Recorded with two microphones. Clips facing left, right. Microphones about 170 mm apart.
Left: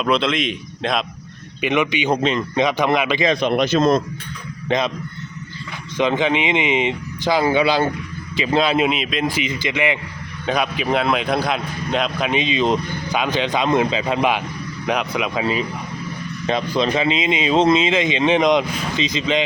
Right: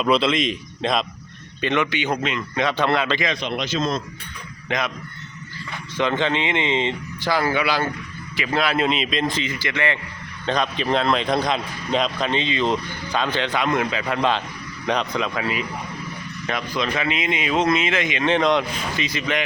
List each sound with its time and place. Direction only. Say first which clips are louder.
0.0 s a man's voice: even; centre (ahead or behind)
1.6 s a man's voice: left 3 dB; 15° left (ahead or behind)
2.1 s speech: left 6 dB; 30° left (ahead or behind)
2.6 s a man's voice: left 2 dB; 15° left (ahead or behind)
3.4 s a man's voice: left 8 dB; 55° left (ahead or behind)
4.7 s speech: left 5 dB; 30° left (ahead or behind)
6.0 s a man's voice: left 3 dB; 15° left (ahead or behind)
8.9 s a man's voice: left 1 dB; 5° left (ahead or behind)
9.4 s a man's voice: left 3 dB; 20° left (ahead or behind)
15.4 s speech: left 4 dB; 30° left (ahead or behind)